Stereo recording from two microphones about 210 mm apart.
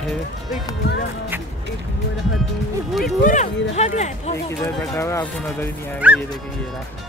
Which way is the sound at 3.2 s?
35° left (ahead or behind).